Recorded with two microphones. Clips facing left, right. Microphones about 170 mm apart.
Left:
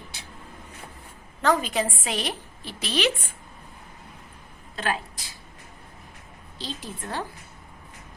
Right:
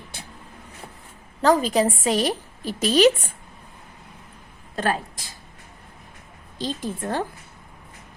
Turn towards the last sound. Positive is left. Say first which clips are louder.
# right 7 dB
turn(degrees=-50)  # may be behind; listen again after turning